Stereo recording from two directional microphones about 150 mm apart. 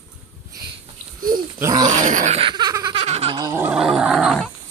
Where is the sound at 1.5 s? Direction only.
20° right (ahead or behind).